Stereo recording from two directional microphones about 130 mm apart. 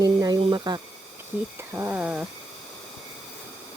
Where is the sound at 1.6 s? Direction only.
20° right (ahead or behind).